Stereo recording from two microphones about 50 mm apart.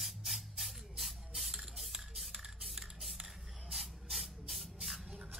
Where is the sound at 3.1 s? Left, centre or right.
Centre.